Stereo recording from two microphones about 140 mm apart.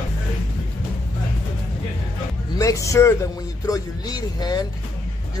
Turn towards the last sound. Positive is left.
turn(degrees=30)  # may be behind; listen again after turning